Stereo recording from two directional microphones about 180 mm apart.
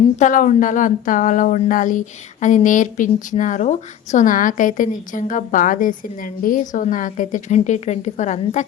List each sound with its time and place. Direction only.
0.2 s a woman's voice: 45° left (ahead or behind)